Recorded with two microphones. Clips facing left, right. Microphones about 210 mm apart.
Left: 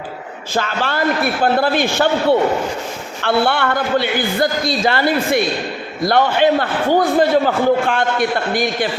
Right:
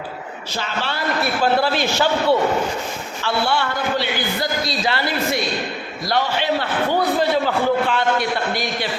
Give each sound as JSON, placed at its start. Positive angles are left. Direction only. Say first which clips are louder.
{"t": 0.5, "sound": "a man's voice", "louder": "left 6 dB", "side_deg": 50}
{"t": 3.2, "sound": "a man's voice", "louder": "left 5 dB", "side_deg": 55}